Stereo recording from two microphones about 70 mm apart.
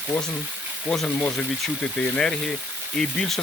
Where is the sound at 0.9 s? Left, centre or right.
Centre.